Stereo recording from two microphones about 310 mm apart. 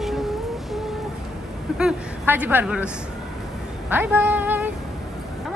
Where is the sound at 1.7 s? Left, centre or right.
Centre.